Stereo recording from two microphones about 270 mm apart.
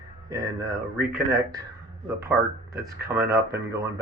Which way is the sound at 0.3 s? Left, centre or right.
Centre.